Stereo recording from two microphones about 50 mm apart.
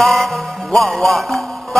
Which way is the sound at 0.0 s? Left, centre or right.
Centre.